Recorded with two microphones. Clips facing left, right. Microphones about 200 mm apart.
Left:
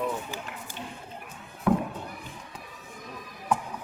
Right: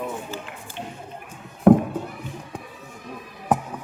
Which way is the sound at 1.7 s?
50° right (ahead or behind).